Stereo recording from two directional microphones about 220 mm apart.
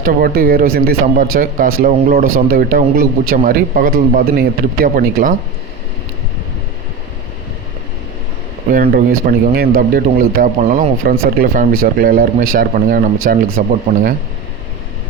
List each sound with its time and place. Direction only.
0.0 s speech: 40° right (ahead or behind)
8.7 s speech: 40° right (ahead or behind)